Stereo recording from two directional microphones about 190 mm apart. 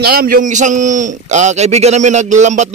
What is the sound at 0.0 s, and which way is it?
A man's voice, 55° right (ahead or behind).